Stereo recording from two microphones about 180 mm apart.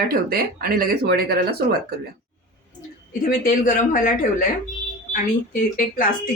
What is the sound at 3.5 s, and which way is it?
Speech, 45° left (ahead or behind).